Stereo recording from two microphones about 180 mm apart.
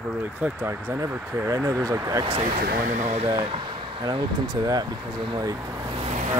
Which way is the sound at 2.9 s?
40° right (ahead or behind).